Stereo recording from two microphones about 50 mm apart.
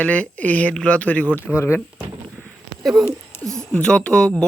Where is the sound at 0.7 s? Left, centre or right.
Left.